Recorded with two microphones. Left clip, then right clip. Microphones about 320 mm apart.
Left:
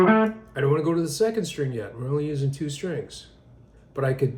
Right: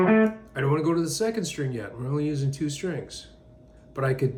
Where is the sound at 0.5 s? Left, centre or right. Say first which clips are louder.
Left 2 dB; centre.